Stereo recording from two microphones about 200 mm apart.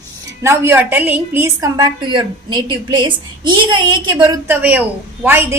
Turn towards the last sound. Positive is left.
turn(degrees=-10)  # may be behind; listen again after turning